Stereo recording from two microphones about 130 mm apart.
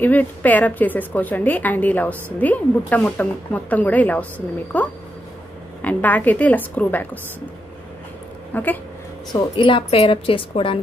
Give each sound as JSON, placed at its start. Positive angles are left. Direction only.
{"t": 0.0, "sound": "speech", "side_deg": 15}
{"t": 8.5, "sound": "speech", "side_deg": 15}
{"t": 9.3, "sound": "a woman's voice", "side_deg": 40}